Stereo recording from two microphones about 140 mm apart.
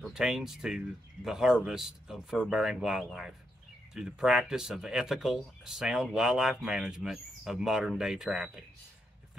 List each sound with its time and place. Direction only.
0.0 s speech: 5° right (ahead or behind)